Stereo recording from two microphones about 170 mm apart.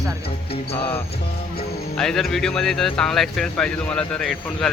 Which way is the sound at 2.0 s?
5° left (ahead or behind).